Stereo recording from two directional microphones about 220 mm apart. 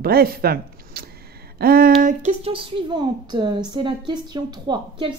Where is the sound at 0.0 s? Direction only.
45° right (ahead or behind).